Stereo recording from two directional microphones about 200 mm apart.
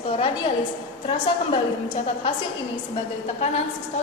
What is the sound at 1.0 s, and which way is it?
A woman's voice, 25° left (ahead or behind).